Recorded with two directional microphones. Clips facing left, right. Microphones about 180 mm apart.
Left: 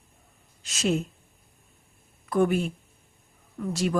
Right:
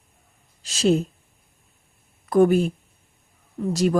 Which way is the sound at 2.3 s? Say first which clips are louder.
Right 6 dB; 40° right (ahead or behind).